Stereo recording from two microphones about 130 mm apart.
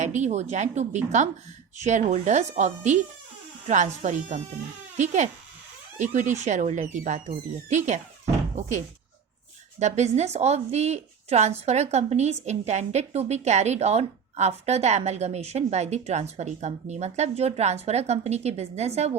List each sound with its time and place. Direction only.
0.0 s a woman's voice: 65° right (ahead or behind)
9.8 s a woman's voice: 60° right (ahead or behind)